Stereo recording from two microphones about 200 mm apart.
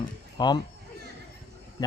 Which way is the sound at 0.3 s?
20° left (ahead or behind).